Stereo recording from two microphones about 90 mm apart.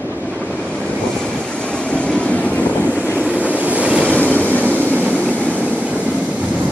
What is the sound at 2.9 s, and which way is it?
Waves, 15° right (ahead or behind).